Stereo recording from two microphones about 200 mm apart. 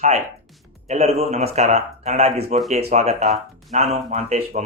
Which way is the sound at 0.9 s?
30° right (ahead or behind).